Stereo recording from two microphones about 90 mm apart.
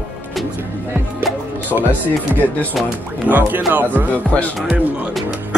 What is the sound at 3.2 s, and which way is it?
Speech, 20° right (ahead or behind).